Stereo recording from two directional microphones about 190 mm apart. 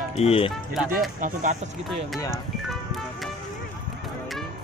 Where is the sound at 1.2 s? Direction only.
40° right (ahead or behind).